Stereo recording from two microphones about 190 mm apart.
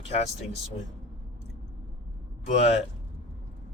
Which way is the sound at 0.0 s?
35° left (ahead or behind).